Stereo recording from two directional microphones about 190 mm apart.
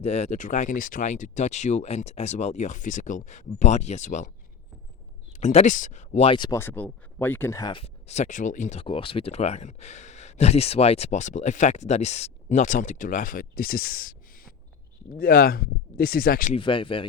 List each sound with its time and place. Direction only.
0.0 s speech: 35° left (ahead or behind)
5.3 s speech: 35° left (ahead or behind)
6.6 s speech: 10° left (ahead or behind); by 16.6 s 45° left (ahead or behind)
16.6 s speech: 25° left (ahead or behind)